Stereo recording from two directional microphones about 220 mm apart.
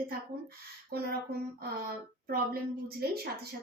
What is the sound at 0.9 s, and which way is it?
Speech, 45° right (ahead or behind).